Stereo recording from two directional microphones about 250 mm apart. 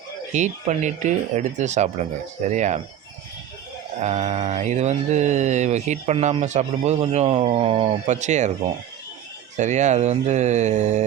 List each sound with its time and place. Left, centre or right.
0.3 s speech: right
4.0 s speech: right
9.6 s speech: right